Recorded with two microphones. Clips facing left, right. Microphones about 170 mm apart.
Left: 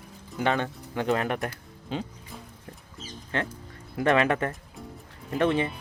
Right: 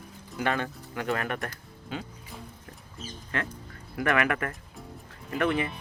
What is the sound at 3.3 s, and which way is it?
Speech, 25° left (ahead or behind).